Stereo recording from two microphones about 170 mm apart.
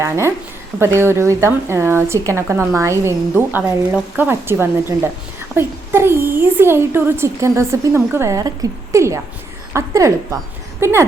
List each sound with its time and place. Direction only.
0.0 s a woman's voice: 15° right (ahead or behind)